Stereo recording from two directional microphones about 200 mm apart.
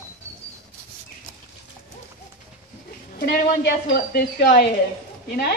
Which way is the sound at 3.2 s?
55° left (ahead or behind).